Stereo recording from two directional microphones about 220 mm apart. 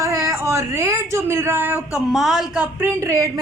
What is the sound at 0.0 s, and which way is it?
A woman's voice, 15° right (ahead or behind).